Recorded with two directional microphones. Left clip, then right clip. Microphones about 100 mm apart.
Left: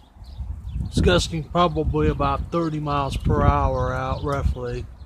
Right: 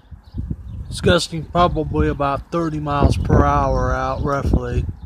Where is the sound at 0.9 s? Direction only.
20° right (ahead or behind); by 4.9 s 35° right (ahead or behind).